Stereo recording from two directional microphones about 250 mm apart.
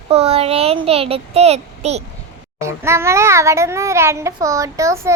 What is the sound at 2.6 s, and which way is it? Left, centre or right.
A child's voice, centre.